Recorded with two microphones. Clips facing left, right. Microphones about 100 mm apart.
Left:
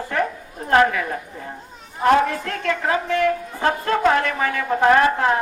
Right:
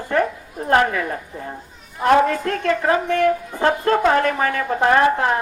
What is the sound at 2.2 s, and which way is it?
A woman's voice, 40° right (ahead or behind).